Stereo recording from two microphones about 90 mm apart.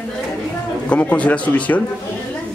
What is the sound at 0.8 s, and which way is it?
Speech, 15° left (ahead or behind).